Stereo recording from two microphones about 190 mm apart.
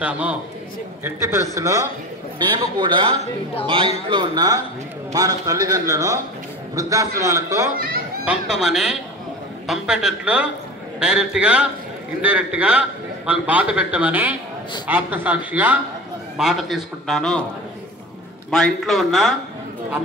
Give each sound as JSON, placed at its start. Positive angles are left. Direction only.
{"t": 0.0, "sound": "a man's voice", "side_deg": -5}
{"t": 1.5, "sound": "a man's voice", "side_deg": -15}
{"t": 8.3, "sound": "a man's voice", "side_deg": -5}
{"t": 18.5, "sound": "a man's voice", "side_deg": 0}